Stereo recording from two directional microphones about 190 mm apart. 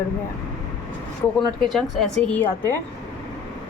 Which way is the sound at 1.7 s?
5° left (ahead or behind).